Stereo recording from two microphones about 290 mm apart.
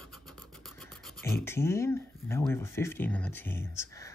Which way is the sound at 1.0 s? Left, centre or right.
Centre.